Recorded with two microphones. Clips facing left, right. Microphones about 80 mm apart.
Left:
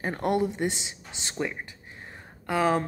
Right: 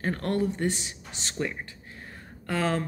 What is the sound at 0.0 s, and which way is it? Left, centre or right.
A woman's voice, centre.